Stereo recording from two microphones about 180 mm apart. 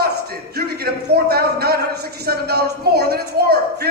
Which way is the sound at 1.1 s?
60° right (ahead or behind).